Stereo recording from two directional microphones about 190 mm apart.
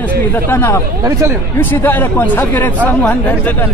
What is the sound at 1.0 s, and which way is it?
Speech, 15° right (ahead or behind).